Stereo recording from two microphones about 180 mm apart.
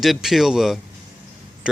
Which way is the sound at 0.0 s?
Centre (ahead or behind).